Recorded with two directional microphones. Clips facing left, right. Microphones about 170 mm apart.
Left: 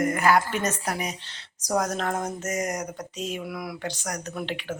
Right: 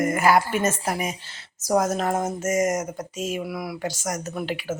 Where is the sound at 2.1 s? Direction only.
25° right (ahead or behind).